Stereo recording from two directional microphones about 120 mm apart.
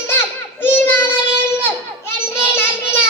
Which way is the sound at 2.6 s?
20° left (ahead or behind).